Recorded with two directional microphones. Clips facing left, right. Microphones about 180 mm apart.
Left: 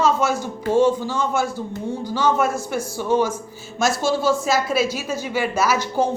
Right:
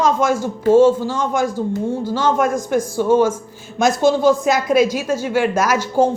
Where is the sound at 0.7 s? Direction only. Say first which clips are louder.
Right 6 dB; 45° right (ahead or behind).